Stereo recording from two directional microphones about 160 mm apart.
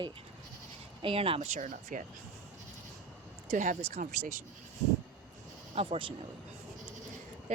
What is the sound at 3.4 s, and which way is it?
Speech, 50° right (ahead or behind).